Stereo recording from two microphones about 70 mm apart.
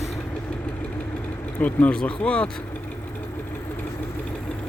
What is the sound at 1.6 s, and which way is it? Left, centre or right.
Speech, left.